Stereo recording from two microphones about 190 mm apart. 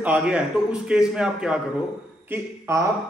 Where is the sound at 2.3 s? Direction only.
15° right (ahead or behind).